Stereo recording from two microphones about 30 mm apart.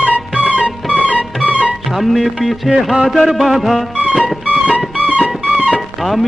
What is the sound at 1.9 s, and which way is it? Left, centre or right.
Music, centre.